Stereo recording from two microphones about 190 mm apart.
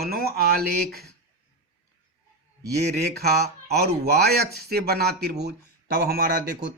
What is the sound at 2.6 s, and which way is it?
A man's voice, 55° right (ahead or behind).